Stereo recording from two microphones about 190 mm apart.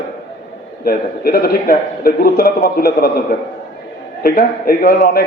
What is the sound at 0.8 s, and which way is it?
A man's voice, 55° left (ahead or behind).